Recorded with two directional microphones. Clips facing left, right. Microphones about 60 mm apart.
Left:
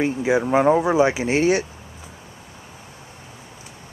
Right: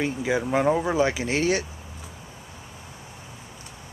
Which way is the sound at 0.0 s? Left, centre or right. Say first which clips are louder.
Left 5 dB; left.